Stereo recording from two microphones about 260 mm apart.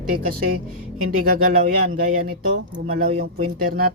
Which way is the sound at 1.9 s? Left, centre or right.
Right.